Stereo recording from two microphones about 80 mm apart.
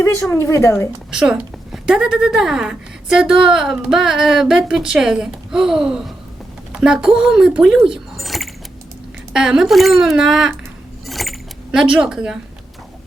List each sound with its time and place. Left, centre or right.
0.0 s a woman's voice: left
1.1 s a woman's voice: centre
11.0 s cutlery: centre